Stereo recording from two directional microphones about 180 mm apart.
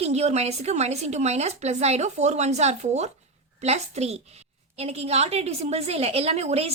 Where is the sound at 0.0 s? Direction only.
35° right (ahead or behind).